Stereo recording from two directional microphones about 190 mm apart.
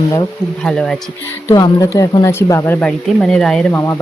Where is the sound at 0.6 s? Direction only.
5° left (ahead or behind).